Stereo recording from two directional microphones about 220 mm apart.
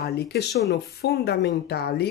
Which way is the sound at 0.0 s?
45° left (ahead or behind).